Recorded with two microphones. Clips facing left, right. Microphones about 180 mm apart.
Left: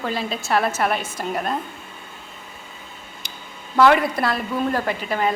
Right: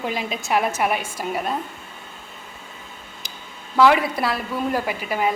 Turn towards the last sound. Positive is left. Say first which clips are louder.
# left 1 dB
turn(degrees=-10)  # may be behind; listen again after turning